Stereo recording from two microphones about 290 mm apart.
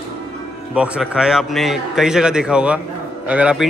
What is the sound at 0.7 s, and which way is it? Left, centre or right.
A man's voice, centre.